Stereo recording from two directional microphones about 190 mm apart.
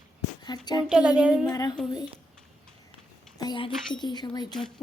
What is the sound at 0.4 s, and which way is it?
Speech, 20° left (ahead or behind).